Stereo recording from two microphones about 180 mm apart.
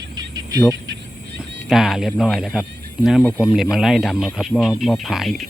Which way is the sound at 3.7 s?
Centre (ahead or behind).